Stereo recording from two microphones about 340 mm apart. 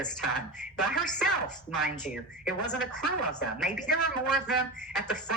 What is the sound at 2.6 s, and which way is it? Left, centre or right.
A woman's voice, centre.